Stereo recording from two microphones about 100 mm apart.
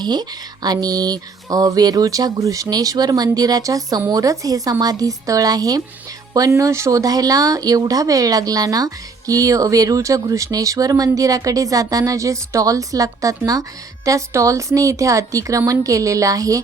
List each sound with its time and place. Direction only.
0.0 s speech: 45° right (ahead or behind)